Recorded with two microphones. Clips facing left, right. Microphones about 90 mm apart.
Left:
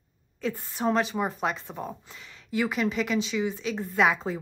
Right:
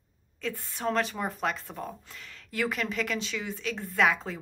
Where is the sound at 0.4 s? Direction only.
10° left (ahead or behind).